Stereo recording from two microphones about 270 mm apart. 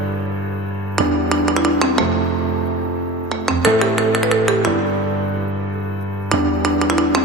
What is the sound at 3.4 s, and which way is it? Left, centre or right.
Music, centre.